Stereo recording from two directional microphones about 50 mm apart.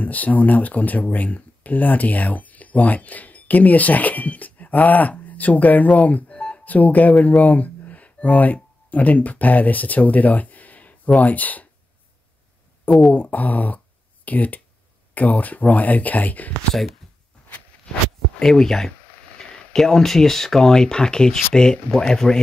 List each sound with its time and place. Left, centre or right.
0.0 s speech: left
13.1 s speech: left
18.4 s speech: centre